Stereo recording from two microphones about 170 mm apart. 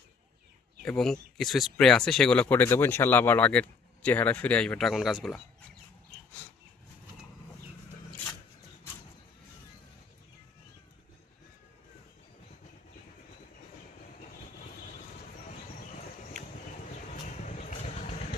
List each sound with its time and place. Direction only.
0.9 s speech: 5° left (ahead or behind)
17.4 s vehicle: 45° left (ahead or behind)